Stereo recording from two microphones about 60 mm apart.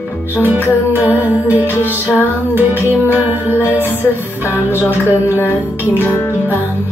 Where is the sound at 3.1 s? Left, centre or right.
Right.